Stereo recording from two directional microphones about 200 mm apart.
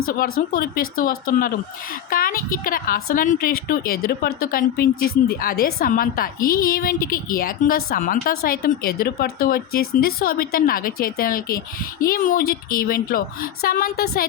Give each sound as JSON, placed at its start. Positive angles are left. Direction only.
{"t": 0.5, "sound": "a woman's voice", "side_deg": 45}